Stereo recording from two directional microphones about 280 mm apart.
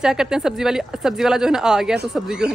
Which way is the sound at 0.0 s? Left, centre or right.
Centre.